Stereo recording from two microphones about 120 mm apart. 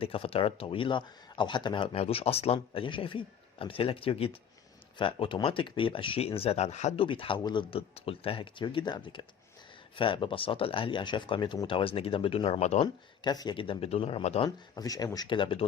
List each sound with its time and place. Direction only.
0.0 s speech: 50° left (ahead or behind); by 6.9 s 70° left (ahead or behind)
6.9 s speech: 50° left (ahead or behind); by 12.9 s 65° left (ahead or behind)
13.2 s speech: 35° left (ahead or behind); by 14.5 s 55° left (ahead or behind)
14.8 s speech: 30° left (ahead or behind)